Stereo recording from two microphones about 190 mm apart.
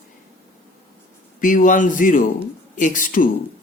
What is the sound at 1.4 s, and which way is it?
A man's voice, 45° left (ahead or behind).